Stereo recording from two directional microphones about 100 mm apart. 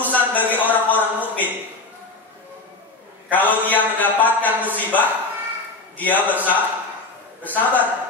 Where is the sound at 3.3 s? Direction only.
15° left (ahead or behind).